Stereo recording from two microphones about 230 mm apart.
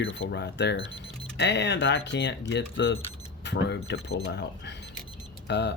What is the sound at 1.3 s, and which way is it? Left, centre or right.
Speech, left.